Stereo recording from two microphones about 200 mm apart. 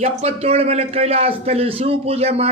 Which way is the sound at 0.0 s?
30° right (ahead or behind).